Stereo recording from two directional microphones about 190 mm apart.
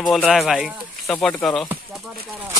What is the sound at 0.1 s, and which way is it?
Speech, centre (ahead or behind).